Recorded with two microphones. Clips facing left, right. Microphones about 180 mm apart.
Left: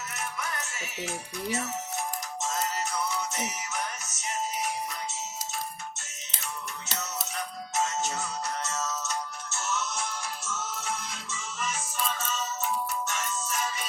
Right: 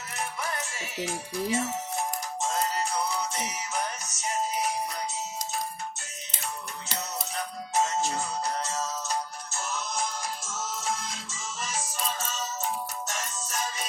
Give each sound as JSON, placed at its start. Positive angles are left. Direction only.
{"t": 0.2, "sound": "music", "side_deg": -30}
{"t": 7.7, "sound": "music", "side_deg": -35}
{"t": 10.4, "sound": "music", "side_deg": -90}
{"t": 11.5, "sound": "music", "side_deg": -35}